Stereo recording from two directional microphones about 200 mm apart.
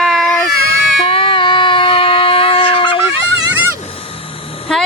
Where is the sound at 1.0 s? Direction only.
25° left (ahead or behind).